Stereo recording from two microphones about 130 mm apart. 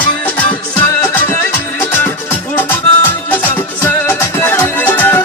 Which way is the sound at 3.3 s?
15° left (ahead or behind).